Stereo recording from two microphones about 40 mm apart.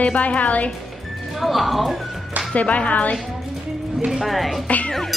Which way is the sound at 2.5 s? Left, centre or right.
Left.